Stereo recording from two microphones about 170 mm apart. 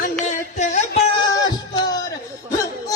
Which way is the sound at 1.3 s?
25° left (ahead or behind).